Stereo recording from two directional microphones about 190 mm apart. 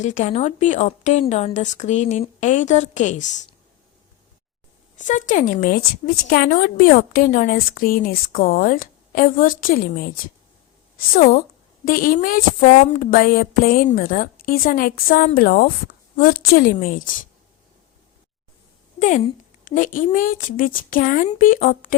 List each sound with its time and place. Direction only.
0.0 s a woman's voice: 40° left (ahead or behind)
4.9 s speech: 40° left (ahead or behind)
11.1 s speech: 45° left (ahead or behind)
18.9 s speech: 40° left (ahead or behind)